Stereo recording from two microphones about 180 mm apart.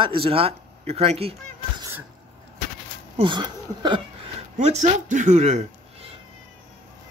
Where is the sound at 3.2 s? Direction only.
25° right (ahead or behind).